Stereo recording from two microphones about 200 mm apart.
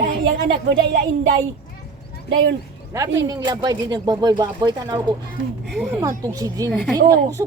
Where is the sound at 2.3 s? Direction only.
65° right (ahead or behind).